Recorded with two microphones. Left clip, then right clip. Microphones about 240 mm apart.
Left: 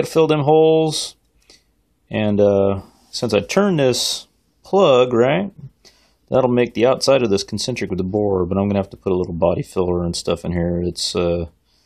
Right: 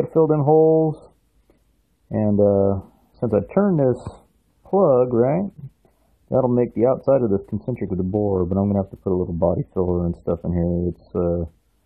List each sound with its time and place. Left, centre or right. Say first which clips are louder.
0.0 s speech: left 2 dB; left